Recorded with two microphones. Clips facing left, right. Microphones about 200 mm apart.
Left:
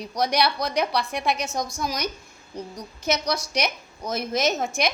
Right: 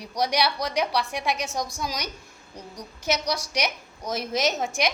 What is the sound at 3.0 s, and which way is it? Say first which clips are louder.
A woman's voice: left 1 dB; 15° right (ahead or behind).